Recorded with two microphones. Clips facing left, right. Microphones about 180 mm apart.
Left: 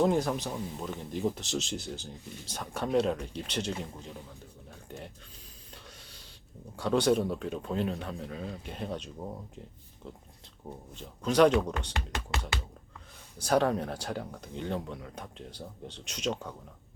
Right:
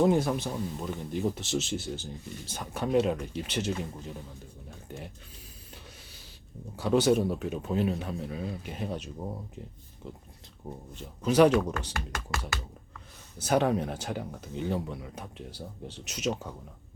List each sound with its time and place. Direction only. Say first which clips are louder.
0.0 s speech: right 2 dB; centre (ahead or behind)
4.9 s speech: right 1 dB; 5° right (ahead or behind)
5.7 s a sound: even; 5° right (ahead or behind)
6.7 s speech: right 2 dB; 5° right (ahead or behind)
10.9 s speech: right 2 dB; 5° right (ahead or behind)
11.9 s speech: even; 20° left (ahead or behind)
13.4 s speech: right 1 dB; 5° right (ahead or behind)